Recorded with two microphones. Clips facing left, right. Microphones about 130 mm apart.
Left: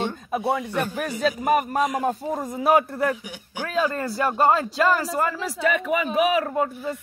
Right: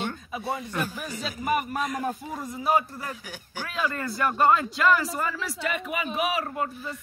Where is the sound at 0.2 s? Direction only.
60° left (ahead or behind).